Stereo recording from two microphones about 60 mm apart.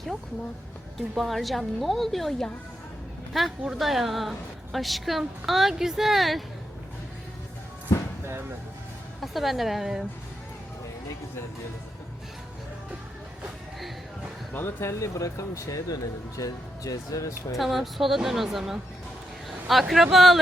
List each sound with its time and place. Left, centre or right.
1.1 s a woman's voice: centre
7.9 s a sound: left
8.3 s music: right
9.2 s a woman's voice: centre
14.5 s speech: left
15.0 s speech: left
16.4 s speech: left
17.6 s a woman's voice: centre
19.5 s a sound: centre
19.9 s a woman's voice: centre